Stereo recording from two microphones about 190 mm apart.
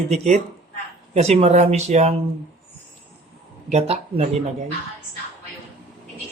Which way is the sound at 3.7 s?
35° right (ahead or behind).